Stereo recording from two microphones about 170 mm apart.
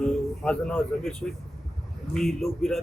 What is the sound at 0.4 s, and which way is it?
Speech, 5° left (ahead or behind).